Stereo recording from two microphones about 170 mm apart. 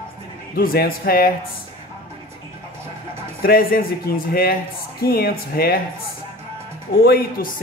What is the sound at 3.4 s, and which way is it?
Speech, 60° left (ahead or behind).